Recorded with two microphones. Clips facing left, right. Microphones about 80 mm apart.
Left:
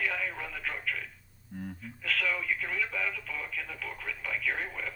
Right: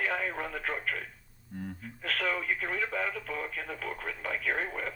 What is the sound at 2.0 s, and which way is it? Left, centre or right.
Speech, right.